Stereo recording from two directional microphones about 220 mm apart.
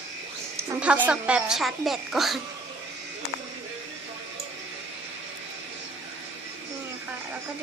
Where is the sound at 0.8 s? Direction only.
5° right (ahead or behind).